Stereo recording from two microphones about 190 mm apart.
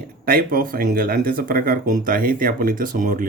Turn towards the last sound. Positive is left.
turn(degrees=-45)  # may be behind; listen again after turning